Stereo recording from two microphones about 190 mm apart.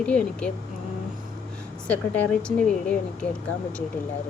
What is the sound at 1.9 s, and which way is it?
A woman's voice, 5° left (ahead or behind).